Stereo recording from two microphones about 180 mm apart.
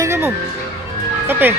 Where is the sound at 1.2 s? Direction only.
10° right (ahead or behind).